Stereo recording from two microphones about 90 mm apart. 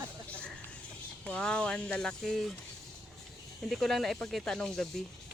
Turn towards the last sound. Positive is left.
turn(degrees=5)  # may be behind; listen again after turning